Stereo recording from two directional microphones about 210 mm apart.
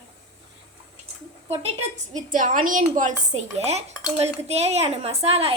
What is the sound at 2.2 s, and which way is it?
Speech, 40° right (ahead or behind).